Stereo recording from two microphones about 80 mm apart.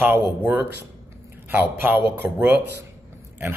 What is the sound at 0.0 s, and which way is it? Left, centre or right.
Speech, right.